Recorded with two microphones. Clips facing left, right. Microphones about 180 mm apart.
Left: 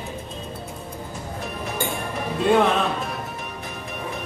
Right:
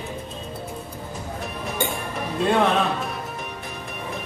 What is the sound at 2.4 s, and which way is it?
Music, centre (ahead or behind).